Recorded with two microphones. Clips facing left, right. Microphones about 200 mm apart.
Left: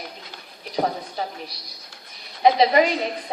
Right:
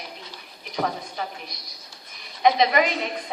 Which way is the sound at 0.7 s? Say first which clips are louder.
Left 3 dB; 35° left (ahead or behind).